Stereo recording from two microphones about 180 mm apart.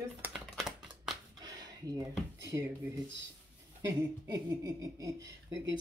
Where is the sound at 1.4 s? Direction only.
20° right (ahead or behind).